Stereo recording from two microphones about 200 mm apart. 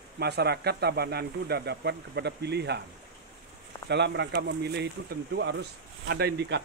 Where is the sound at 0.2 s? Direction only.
55° right (ahead or behind).